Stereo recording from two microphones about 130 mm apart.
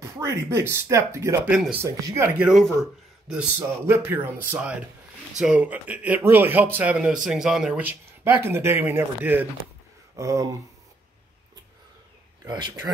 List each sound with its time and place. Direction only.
0.0 s speech: 20° right (ahead or behind)
1.5 s a man's voice: 10° right (ahead or behind)
1.8 s speech: 20° right (ahead or behind)
2.3 s a man's voice: 10° right (ahead or behind)
2.6 s a man's voice: 5° left (ahead or behind)
3.5 s a man's voice: 20° right (ahead or behind)
8.2 s a man's voice: 20° right (ahead or behind)
12.4 s speech: 35° right (ahead or behind)